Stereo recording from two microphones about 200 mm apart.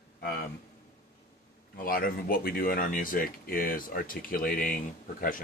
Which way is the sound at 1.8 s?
45° left (ahead or behind).